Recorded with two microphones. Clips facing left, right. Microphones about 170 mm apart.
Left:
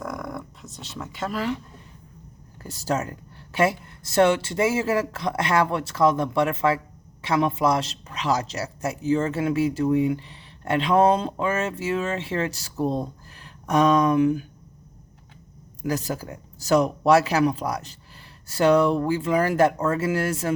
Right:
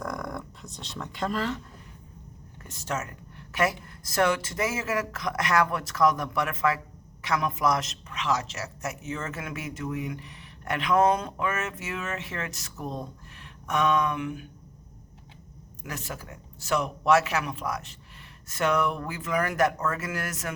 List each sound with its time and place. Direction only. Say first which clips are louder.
0.0 s a sound: left 2 dB; centre (ahead or behind)
2.6 s speech: left 7 dB; 35° left (ahead or behind)
15.8 s speech: left 11 dB; 35° left (ahead or behind)